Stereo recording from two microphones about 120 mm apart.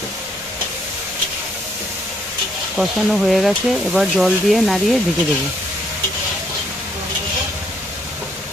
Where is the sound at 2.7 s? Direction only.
Centre (ahead or behind).